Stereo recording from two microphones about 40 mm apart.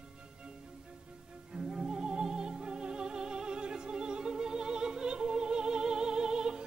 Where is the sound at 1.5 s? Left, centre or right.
Centre.